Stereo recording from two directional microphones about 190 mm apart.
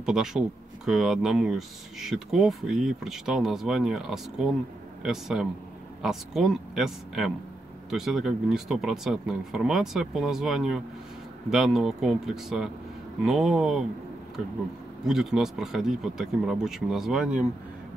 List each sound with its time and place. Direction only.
0.0 s speech: 5° right (ahead or behind)
15.0 s speech: centre (ahead or behind)